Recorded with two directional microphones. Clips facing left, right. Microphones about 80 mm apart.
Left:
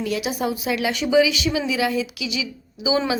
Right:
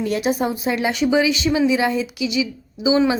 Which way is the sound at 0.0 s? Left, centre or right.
Right.